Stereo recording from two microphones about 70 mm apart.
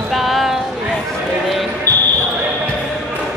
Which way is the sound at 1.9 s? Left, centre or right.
Right.